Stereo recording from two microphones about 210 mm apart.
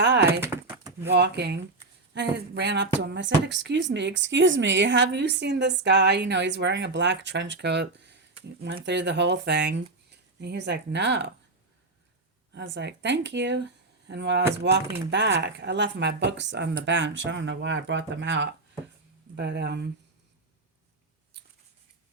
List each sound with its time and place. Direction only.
0.0 s typing: 55° right (ahead or behind)
0.3 s a sound: 10° right (ahead or behind)
1.1 s speech: 55° right (ahead or behind)
12.5 s speech: 55° right (ahead or behind)